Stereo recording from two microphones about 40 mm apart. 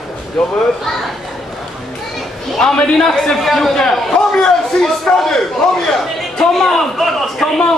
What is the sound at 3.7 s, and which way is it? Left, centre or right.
A man's voice, centre.